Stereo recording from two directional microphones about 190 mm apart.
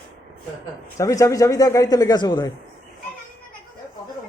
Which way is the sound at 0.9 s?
15° left (ahead or behind).